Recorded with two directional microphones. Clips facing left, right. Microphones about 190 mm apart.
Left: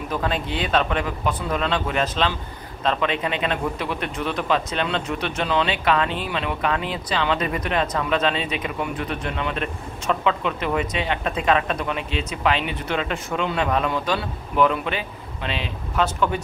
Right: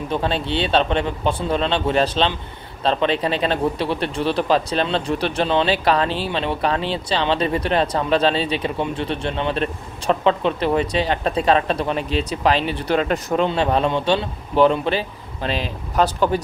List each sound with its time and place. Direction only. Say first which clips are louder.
0.1 s speech: right 3 dB; 30° right (ahead or behind)